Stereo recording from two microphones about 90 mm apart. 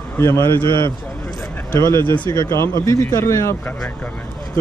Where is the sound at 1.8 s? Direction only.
30° left (ahead or behind).